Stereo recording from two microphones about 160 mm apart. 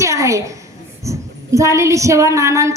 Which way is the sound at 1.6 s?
20° right (ahead or behind).